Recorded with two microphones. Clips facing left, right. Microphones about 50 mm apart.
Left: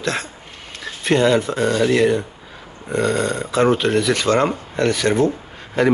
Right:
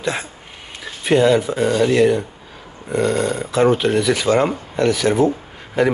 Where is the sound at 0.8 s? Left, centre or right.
Centre.